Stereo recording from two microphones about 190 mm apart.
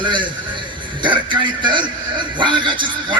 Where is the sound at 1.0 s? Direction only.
25° right (ahead or behind).